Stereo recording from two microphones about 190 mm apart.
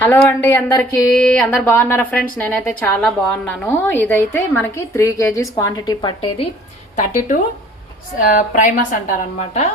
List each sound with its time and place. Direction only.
0.0 s a woman's voice: 10° left (ahead or behind)
6.9 s a woman's voice: 45° left (ahead or behind)